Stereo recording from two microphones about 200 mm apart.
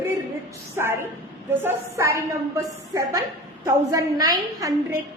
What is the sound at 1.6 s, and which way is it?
A woman's voice, 15° right (ahead or behind).